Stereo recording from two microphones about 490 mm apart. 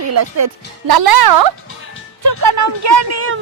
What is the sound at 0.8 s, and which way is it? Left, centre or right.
Speech, right.